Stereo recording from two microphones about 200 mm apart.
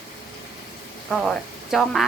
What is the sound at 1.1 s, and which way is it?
Speech, centre (ahead or behind).